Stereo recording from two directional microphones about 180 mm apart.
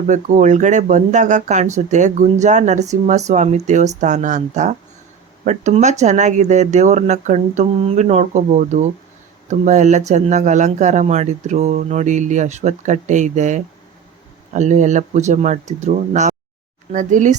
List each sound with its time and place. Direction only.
0.1 s speech: 45° right (ahead or behind)